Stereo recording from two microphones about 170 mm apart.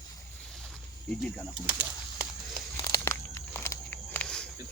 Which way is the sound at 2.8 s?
15° left (ahead or behind).